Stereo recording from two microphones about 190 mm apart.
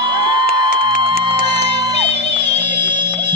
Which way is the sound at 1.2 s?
25° right (ahead or behind).